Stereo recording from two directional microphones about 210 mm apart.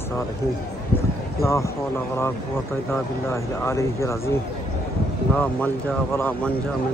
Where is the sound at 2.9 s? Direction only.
10° left (ahead or behind).